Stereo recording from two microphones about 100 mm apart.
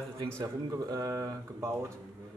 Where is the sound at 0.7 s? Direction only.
35° right (ahead or behind).